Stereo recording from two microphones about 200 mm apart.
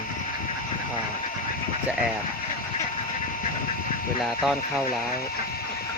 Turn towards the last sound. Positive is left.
turn(degrees=-5)  # may be behind; listen again after turning